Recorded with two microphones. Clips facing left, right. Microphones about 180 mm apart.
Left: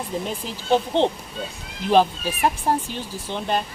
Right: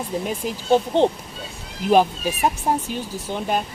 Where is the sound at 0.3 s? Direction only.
10° right (ahead or behind).